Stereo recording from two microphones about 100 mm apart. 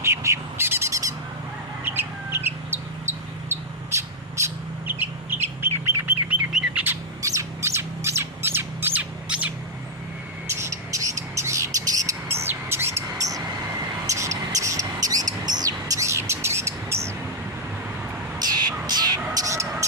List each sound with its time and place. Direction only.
0.0 s bird: 30° right (ahead or behind)
1.8 s bird: 20° right (ahead or behind)
3.5 s bird: 30° right (ahead or behind)
6.5 s bird: 10° right (ahead or behind)
7.2 s squawk: 30° right (ahead or behind)
9.3 s bird: 10° right (ahead or behind)
10.4 s bird: 25° right (ahead or behind)
18.3 s a sound: 45° right (ahead or behind)